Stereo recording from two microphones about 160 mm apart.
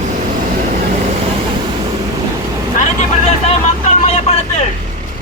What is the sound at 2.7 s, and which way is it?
Vehicle, 50° left (ahead or behind).